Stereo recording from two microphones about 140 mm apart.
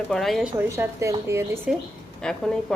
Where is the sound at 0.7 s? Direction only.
20° right (ahead or behind).